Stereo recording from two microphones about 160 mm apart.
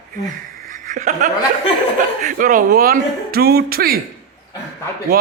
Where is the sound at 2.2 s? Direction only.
55° right (ahead or behind); by 3.9 s 70° right (ahead or behind).